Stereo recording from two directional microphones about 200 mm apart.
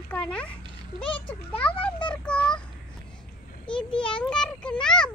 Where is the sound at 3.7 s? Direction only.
5° left (ahead or behind).